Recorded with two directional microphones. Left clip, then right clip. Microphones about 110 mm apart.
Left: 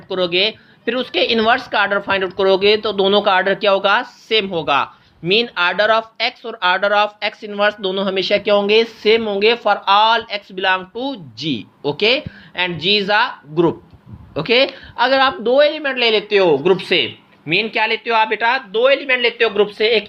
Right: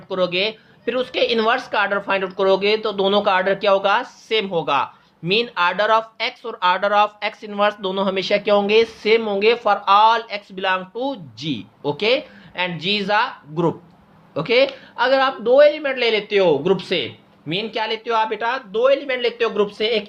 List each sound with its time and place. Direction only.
0.1 s a woman's voice: 15° left (ahead or behind); by 19.5 s centre (ahead or behind)
19.5 s a woman's voice: 15° left (ahead or behind)